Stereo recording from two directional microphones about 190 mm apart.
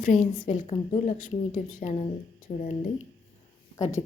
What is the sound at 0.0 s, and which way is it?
A woman's voice, 40° left (ahead or behind).